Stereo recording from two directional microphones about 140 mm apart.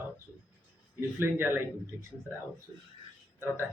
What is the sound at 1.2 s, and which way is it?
Speech, 15° right (ahead or behind).